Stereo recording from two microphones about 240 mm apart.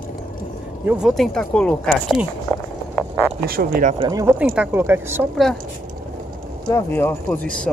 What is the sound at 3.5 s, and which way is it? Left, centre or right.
Speech, right.